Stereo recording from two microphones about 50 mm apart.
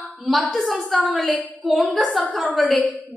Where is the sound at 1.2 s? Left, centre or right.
Left.